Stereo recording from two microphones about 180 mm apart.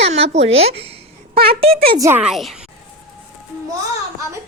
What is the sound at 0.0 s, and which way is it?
Speech, 35° right (ahead or behind).